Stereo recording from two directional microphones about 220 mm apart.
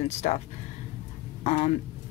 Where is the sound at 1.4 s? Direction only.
30° left (ahead or behind).